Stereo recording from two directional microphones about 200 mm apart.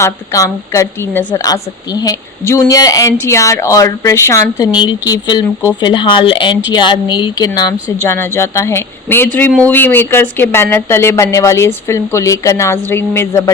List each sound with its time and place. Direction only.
0.0 s speech: 15° left (ahead or behind)